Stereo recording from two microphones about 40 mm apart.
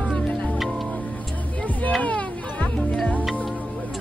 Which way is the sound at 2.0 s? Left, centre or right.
Left.